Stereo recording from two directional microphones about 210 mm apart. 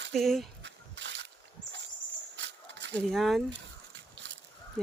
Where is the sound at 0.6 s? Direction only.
60° right (ahead or behind).